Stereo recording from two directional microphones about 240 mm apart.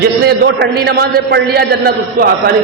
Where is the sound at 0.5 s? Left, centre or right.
Right.